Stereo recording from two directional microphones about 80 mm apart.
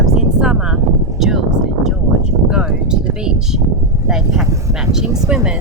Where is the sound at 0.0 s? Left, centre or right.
Centre.